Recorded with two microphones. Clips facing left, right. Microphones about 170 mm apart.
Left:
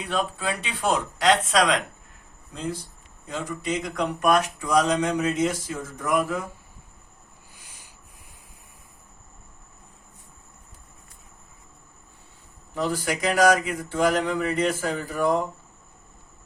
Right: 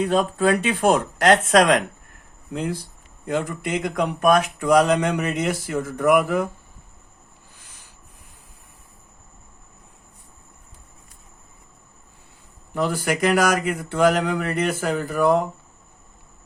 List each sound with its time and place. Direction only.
0.0 s speech: 45° right (ahead or behind)
2.5 s speech: 70° right (ahead or behind)
7.5 s a sound: 10° left (ahead or behind)
12.7 s speech: 65° right (ahead or behind)